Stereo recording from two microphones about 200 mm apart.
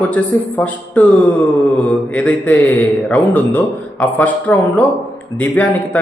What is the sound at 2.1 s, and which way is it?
A man's voice, 5° left (ahead or behind).